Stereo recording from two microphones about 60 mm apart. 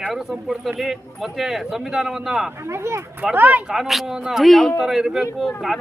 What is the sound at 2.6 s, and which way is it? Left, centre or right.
Speech, right.